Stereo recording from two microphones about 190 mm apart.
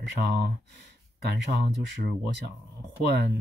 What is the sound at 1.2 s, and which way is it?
Speech, 60° right (ahead or behind).